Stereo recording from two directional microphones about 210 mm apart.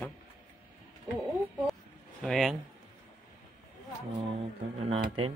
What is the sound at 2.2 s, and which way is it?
Speech, centre (ahead or behind).